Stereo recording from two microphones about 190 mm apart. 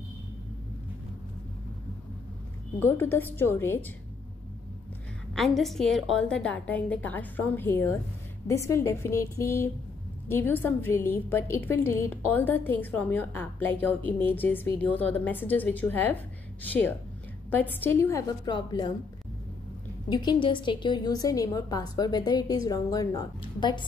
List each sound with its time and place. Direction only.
2.8 s a woman's voice: 10° left (ahead or behind)
5.3 s a woman's voice: centre (ahead or behind); by 18.9 s 20° left (ahead or behind)
20.1 s a woman's voice: 20° left (ahead or behind)